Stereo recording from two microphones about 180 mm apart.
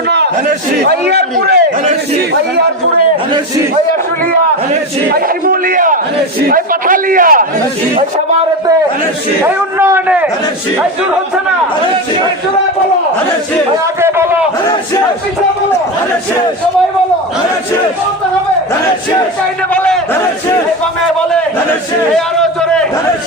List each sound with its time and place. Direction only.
0.9 s a man's voice: 65° right (ahead or behind)
5.1 s a man's voice: 50° right (ahead or behind)
9.4 s a man's voice: 15° right (ahead or behind)
19.7 s a man's voice: 5° left (ahead or behind)
22.4 s a man's voice: 5° left (ahead or behind)